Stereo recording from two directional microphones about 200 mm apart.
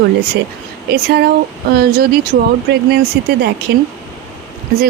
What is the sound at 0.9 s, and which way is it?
Speech, 55° right (ahead or behind).